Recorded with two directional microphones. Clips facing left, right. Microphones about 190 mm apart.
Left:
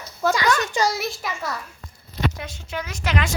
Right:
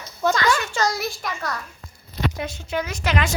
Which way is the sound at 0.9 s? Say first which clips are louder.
Even; centre (ahead or behind).